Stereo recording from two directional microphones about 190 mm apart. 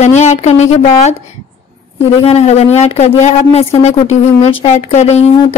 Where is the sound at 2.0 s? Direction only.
30° left (ahead or behind).